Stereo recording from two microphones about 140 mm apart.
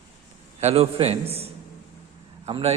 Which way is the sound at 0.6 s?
50° right (ahead or behind).